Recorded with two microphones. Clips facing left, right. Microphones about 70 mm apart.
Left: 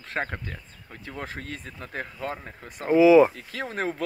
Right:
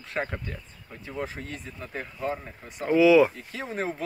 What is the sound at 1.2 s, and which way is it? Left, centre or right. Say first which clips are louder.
Speech: right 2 dB; left.